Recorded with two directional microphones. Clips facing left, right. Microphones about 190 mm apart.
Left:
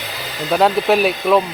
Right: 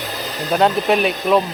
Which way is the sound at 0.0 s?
45° right (ahead or behind).